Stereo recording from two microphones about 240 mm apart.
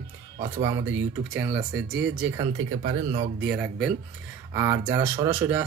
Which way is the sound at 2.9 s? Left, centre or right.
Right.